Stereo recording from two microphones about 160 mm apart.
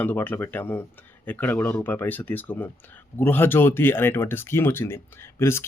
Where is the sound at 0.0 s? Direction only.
10° left (ahead or behind).